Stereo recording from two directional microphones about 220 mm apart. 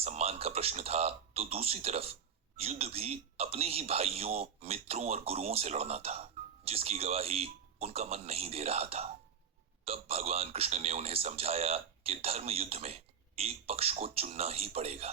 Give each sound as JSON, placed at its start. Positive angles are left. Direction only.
{"t": 0.0, "sound": "speech", "side_deg": -30}